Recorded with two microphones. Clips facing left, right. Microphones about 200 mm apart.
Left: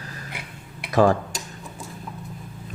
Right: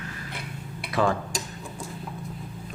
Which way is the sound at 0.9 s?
40° left (ahead or behind).